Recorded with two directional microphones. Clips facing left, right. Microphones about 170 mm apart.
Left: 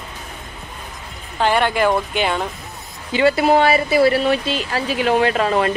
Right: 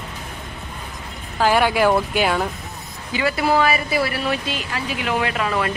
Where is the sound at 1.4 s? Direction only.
5° right (ahead or behind).